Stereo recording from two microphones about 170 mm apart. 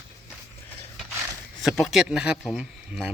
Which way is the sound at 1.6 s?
Centre (ahead or behind).